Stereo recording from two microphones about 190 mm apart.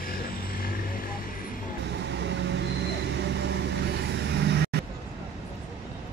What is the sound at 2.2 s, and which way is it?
Vehicle, 65° right (ahead or behind).